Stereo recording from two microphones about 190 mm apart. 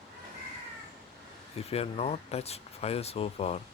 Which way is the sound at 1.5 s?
30° left (ahead or behind).